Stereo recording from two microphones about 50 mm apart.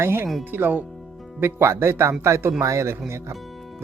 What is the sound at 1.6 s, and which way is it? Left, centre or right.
A man's voice, right.